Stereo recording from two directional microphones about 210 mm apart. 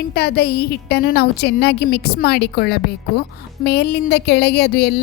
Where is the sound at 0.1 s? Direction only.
50° left (ahead or behind).